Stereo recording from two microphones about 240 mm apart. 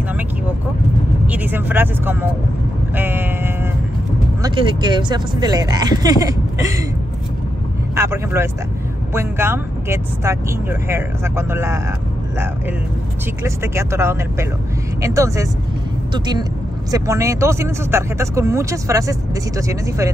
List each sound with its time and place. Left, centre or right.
1.2 s speech: centre
3.0 s vehicle: centre
4.4 s speech: centre
7.9 s speech: centre
13.6 s speech: centre